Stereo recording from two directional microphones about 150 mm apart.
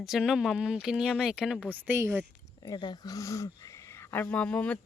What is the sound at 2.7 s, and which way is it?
Speech, 30° left (ahead or behind).